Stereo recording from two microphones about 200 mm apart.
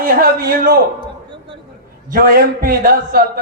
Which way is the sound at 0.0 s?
45° right (ahead or behind).